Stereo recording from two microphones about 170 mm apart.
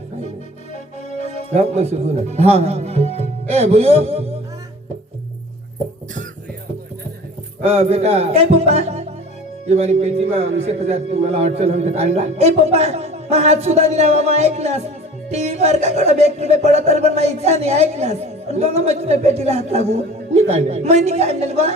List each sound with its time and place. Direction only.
0.7 s music: 45° left (ahead or behind)
1.5 s a man's voice: 40° right (ahead or behind)
7.6 s a man's voice: 40° right (ahead or behind)